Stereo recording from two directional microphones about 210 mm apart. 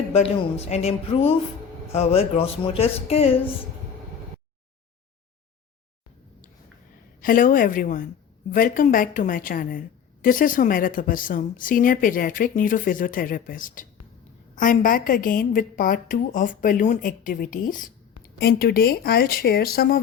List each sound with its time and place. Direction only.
0.1 s speech: 30° left (ahead or behind)
7.2 s a woman's voice: 40° left (ahead or behind)